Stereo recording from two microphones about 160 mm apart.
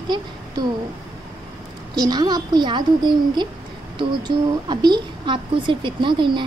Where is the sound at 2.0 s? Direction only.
25° right (ahead or behind).